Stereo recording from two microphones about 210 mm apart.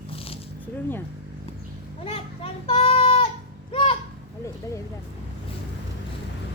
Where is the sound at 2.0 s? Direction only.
25° left (ahead or behind).